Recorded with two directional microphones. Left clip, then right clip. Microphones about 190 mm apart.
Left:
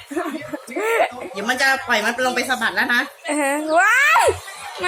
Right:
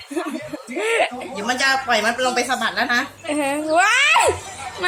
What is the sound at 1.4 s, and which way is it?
Speech, 20° right (ahead or behind).